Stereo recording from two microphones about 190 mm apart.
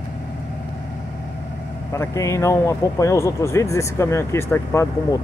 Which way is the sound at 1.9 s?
15° left (ahead or behind).